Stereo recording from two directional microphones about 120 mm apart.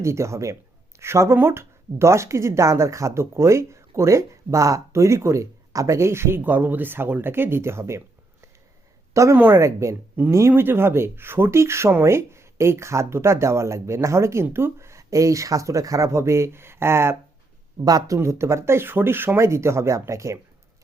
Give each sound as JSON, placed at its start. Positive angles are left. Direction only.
{"t": 0.0, "sound": "speech", "side_deg": -25}